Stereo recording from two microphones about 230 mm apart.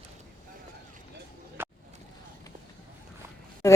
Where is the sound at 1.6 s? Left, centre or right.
Centre.